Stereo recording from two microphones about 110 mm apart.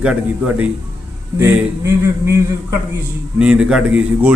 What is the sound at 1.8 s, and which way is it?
Speech, 25° right (ahead or behind).